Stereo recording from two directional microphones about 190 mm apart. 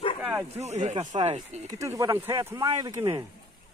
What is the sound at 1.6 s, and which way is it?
Speech, 15° right (ahead or behind).